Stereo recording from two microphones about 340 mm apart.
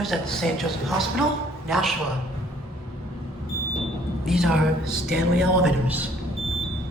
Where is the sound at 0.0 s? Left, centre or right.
Centre.